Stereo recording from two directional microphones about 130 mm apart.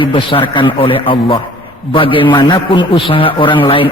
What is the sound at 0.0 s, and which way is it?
A man's voice, 40° left (ahead or behind).